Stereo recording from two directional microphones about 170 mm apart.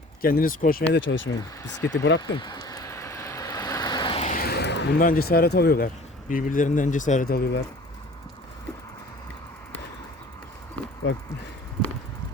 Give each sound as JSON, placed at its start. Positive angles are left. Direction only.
{"t": 0.2, "sound": "speech", "side_deg": 60}
{"t": 1.4, "sound": "speech", "side_deg": 20}
{"t": 2.3, "sound": "vehicle", "side_deg": 25}
{"t": 4.4, "sound": "a sound", "side_deg": 70}
{"t": 5.0, "sound": "speech", "side_deg": 60}